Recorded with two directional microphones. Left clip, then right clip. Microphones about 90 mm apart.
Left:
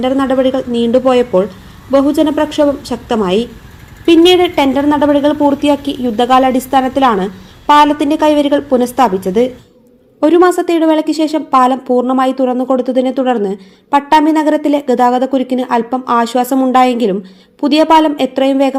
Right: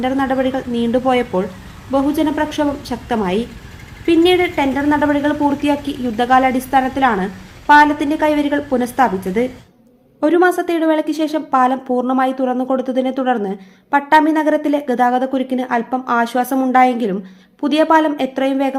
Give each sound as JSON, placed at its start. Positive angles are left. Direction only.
{"t": 0.0, "sound": "a woman's voice", "side_deg": 35}
{"t": 4.7, "sound": "a woman's voice", "side_deg": 40}